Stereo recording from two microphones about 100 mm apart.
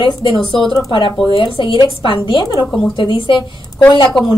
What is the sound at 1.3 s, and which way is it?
A man's voice, 60° left (ahead or behind).